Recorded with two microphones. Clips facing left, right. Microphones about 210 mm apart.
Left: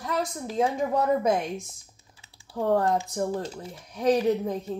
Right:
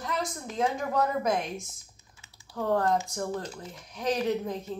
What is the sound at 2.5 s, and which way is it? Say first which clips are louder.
A man's voice: left 3 dB; 25° left (ahead or behind).